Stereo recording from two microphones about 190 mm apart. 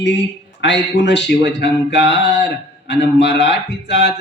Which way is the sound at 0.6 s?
70° left (ahead or behind).